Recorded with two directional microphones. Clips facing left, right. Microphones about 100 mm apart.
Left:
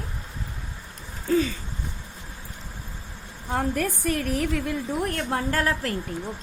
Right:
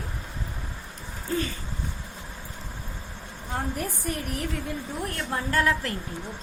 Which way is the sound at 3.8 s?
90° left.